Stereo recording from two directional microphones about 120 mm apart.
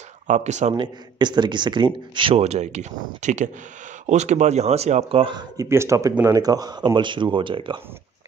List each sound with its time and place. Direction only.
0.3 s speech: 75° right (ahead or behind)
0.7 s speech: 40° right (ahead or behind)
2.3 s speech: 65° right (ahead or behind); by 3.4 s 85° right
4.0 s speech: 75° right (ahead or behind)
5.2 s speech: 40° right (ahead or behind)
5.7 s speech: 25° right (ahead or behind); by 7.8 s 40° right (ahead or behind)